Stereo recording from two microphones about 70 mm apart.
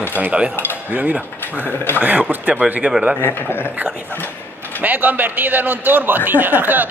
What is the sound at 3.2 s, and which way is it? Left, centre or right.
Speech, left.